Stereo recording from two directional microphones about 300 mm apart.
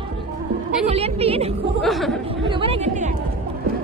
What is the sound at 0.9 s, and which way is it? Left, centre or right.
Speech, centre.